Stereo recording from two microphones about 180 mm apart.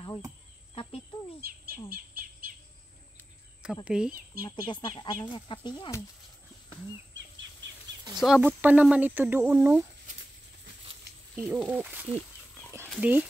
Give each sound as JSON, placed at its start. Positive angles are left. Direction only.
{"t": 3.8, "sound": "speech", "side_deg": -5}
{"t": 4.5, "sound": "speech", "side_deg": 25}
{"t": 8.2, "sound": "speech", "side_deg": -5}
{"t": 11.3, "sound": "speech", "side_deg": -10}